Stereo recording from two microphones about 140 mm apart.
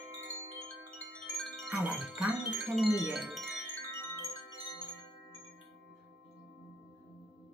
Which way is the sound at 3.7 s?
15° left (ahead or behind).